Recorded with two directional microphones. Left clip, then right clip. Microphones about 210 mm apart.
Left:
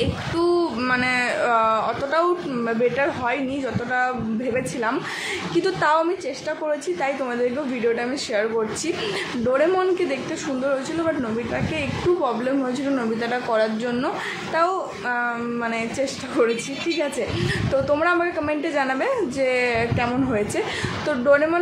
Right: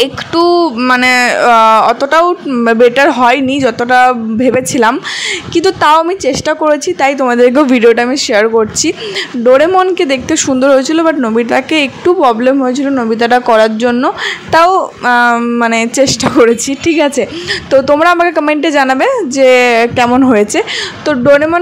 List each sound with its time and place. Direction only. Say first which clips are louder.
0.0 s speech: right 12 dB; 40° right (ahead or behind)
17.8 s a woman's voice: right 11 dB; 40° right (ahead or behind)